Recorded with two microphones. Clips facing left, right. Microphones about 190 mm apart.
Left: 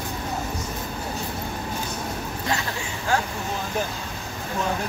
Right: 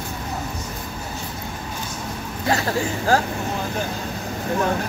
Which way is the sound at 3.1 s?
35° right (ahead or behind).